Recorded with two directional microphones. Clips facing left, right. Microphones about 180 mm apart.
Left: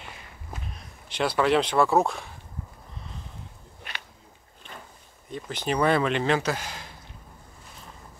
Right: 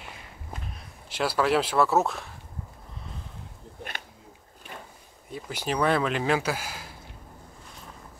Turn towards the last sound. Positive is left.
turn(degrees=-5)  # may be behind; listen again after turning